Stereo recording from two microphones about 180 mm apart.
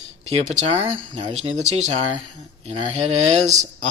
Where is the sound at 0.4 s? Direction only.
40° right (ahead or behind).